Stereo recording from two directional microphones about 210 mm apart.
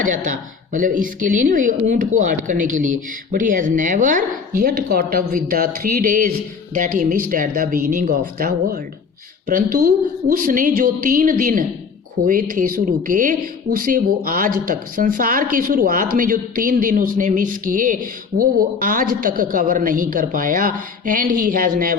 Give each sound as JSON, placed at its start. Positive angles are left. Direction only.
{"t": 0.0, "sound": "speech", "side_deg": -40}